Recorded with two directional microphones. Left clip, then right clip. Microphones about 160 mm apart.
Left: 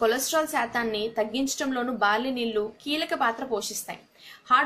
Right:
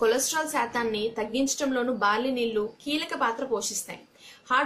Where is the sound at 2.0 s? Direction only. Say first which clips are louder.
Left 2 dB; 45° left (ahead or behind).